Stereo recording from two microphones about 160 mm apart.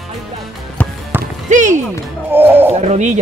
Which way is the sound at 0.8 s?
10° left (ahead or behind).